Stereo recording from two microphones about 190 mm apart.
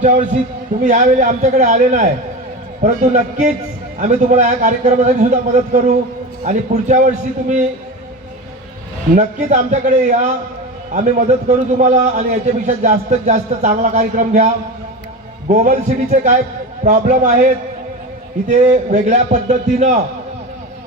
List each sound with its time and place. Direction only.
0.8 s a man's voice: 40° right (ahead or behind)
9.1 s a man's voice: 40° right (ahead or behind)
11.4 s a man's voice: 40° right (ahead or behind)